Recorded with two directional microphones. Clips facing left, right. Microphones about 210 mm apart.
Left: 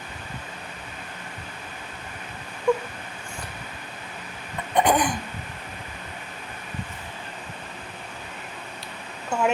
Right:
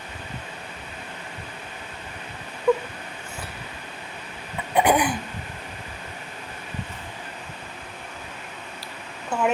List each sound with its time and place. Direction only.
2.7 s whimper: 5° right (ahead or behind)
4.7 s throat clearing: 10° right (ahead or behind)
9.3 s a sound: 5° right (ahead or behind)